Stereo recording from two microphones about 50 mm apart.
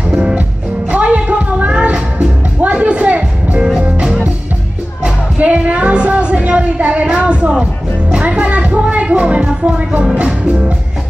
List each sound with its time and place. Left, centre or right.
0.9 s music: right
5.4 s a sound: right
8.1 s music: right